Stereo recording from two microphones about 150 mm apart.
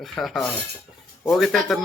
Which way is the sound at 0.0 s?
Centre (ahead or behind).